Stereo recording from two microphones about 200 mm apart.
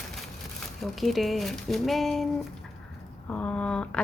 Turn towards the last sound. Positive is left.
turn(degrees=5)  # may be behind; listen again after turning